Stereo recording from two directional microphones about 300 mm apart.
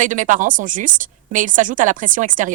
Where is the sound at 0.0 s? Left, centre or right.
Right.